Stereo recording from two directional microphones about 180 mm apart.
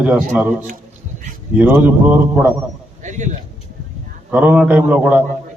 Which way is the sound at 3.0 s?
45° right (ahead or behind).